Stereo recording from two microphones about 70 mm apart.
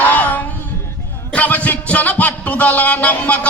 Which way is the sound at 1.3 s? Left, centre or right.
Left.